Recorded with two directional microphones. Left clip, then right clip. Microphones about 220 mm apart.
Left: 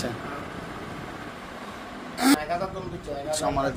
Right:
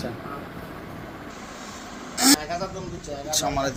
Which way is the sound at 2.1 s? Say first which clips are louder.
Right 2 dB; 10° left (ahead or behind).